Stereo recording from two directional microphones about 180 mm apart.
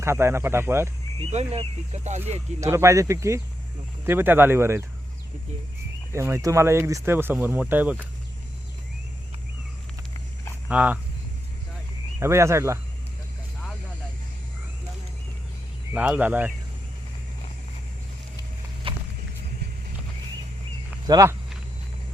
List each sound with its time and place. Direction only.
0.0 s speech: 15° right (ahead or behind)
1.2 s speech: 35° right (ahead or behind)
2.6 s speech: 15° right (ahead or behind)
6.1 s speech: 15° right (ahead or behind)
10.7 s speech: 10° right (ahead or behind)
12.2 s speech: 15° right (ahead or behind)
15.9 s speech: 5° right (ahead or behind)
18.8 s vehicle: 30° right (ahead or behind)
21.1 s speech: 20° right (ahead or behind)